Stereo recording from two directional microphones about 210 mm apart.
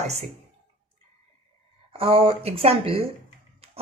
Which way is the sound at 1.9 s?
25° right (ahead or behind).